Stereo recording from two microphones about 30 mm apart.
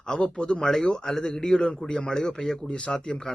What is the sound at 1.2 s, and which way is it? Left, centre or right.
Speech, left.